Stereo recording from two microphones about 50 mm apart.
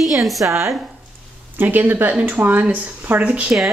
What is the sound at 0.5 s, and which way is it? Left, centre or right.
Speech, right.